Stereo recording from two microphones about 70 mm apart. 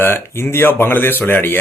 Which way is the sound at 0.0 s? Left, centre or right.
Left.